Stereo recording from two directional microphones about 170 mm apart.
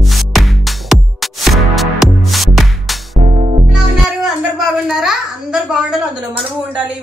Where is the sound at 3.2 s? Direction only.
35° right (ahead or behind).